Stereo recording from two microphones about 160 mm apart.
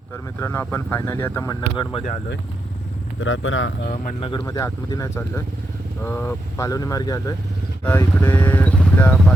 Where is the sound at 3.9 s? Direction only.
50° left (ahead or behind).